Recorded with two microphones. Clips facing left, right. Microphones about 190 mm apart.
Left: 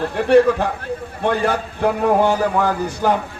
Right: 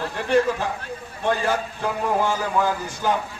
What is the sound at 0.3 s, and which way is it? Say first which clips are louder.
A man's voice: left 7 dB; 60° left (ahead or behind).